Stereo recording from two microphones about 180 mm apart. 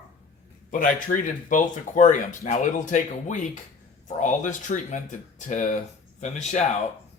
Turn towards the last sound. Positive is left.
turn(degrees=40)  # may be behind; listen again after turning